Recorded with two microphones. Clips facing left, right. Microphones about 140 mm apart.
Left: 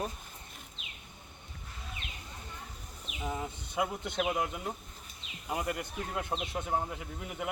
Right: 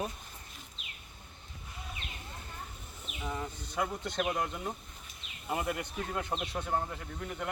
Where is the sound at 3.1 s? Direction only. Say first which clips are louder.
Left 1 dB; 15° left (ahead or behind).